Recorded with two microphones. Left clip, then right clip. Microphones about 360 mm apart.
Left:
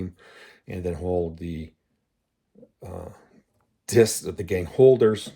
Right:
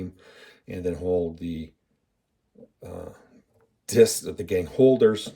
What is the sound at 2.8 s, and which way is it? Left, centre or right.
Speech, left.